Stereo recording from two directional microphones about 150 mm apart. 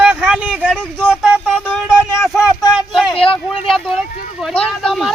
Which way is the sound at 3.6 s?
Centre (ahead or behind).